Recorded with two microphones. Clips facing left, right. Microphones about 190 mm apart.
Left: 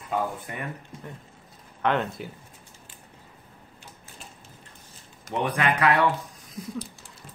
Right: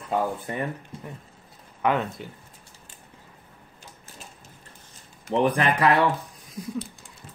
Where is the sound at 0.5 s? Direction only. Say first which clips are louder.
Right 6 dB; 30° right (ahead or behind).